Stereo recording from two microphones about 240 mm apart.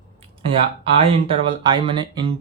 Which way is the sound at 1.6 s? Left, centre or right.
Centre.